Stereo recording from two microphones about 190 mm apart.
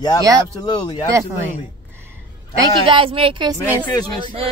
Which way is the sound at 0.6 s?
25° left (ahead or behind).